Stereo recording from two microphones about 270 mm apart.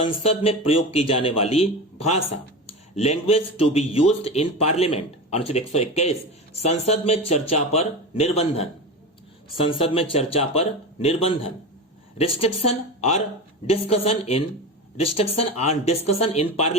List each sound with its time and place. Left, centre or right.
0.2 s speech: left